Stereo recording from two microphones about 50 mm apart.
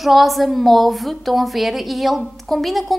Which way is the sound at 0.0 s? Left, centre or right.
Centre.